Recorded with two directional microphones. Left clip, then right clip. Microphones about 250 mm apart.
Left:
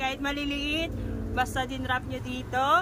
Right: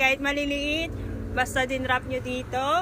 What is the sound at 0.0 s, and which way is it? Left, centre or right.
Speech, centre.